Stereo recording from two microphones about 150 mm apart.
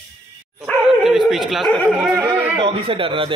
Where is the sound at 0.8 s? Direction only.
5° right (ahead or behind).